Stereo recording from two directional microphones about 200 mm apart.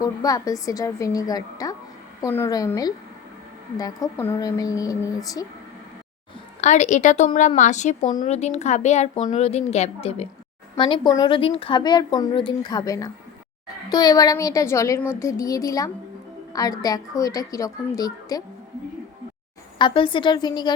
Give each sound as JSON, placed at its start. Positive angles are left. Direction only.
{"t": 0.0, "sound": "speech", "side_deg": 15}
{"t": 6.6, "sound": "a woman's voice", "side_deg": 35}
{"t": 19.8, "sound": "a woman's voice", "side_deg": 25}